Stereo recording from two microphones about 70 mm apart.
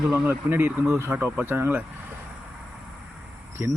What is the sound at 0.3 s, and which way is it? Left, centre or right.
Speech, right.